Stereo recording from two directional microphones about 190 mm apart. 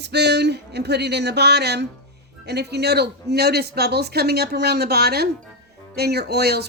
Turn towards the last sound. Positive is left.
turn(degrees=-55)  # may be behind; listen again after turning